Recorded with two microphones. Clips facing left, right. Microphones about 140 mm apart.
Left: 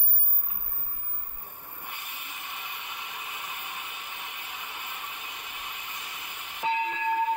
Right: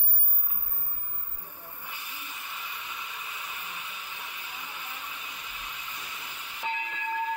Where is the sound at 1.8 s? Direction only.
60° left (ahead or behind).